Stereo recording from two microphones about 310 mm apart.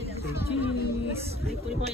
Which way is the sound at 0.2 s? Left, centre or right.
Centre.